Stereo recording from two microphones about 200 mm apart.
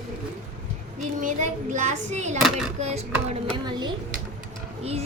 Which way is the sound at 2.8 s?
35° right (ahead or behind).